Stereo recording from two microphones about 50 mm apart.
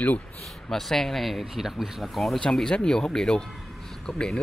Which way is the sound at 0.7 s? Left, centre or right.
Centre.